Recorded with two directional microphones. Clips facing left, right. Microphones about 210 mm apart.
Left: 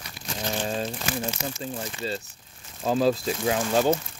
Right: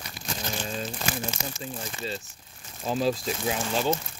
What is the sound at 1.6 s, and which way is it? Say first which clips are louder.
Speech: left 4 dB; 40° left (ahead or behind).